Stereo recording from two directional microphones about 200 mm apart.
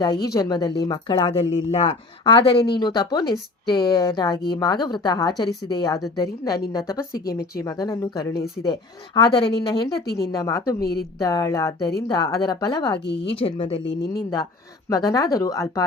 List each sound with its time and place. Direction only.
0.0 s speech: 20° left (ahead or behind)
10.8 s a woman's voice: 50° left (ahead or behind)
11.2 s speech: 20° left (ahead or behind)